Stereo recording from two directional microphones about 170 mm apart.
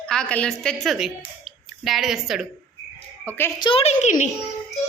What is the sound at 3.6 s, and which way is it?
Speech, 30° left (ahead or behind).